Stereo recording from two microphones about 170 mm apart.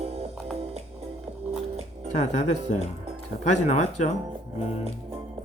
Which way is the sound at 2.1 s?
40° left (ahead or behind).